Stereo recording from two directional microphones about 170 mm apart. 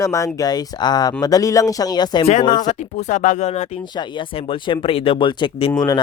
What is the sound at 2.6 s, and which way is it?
Speech, 45° left (ahead or behind).